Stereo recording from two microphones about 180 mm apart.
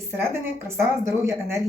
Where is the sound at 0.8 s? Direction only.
15° right (ahead or behind).